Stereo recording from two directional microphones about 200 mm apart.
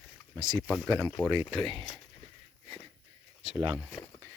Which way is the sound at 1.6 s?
25° right (ahead or behind).